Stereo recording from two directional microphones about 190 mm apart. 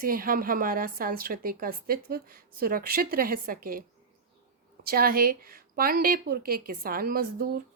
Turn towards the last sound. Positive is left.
turn(degrees=-50)  # may be behind; listen again after turning